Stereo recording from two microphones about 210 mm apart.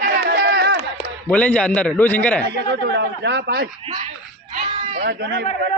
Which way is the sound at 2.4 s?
50° right (ahead or behind).